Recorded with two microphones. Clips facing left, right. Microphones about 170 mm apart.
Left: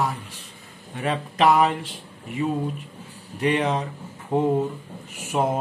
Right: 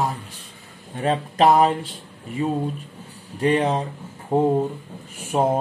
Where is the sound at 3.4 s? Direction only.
35° right (ahead or behind).